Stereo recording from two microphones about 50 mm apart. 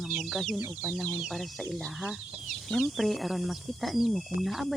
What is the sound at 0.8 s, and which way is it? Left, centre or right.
Speech, left.